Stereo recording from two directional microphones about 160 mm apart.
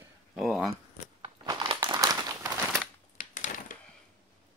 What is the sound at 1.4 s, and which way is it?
Crumpling, 25° right (ahead or behind).